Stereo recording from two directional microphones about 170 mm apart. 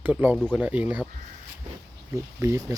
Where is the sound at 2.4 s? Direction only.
15° right (ahead or behind).